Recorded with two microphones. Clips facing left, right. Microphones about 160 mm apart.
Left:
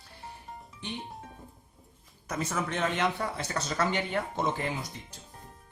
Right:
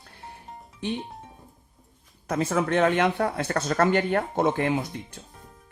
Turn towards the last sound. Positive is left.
turn(degrees=-65)  # may be behind; listen again after turning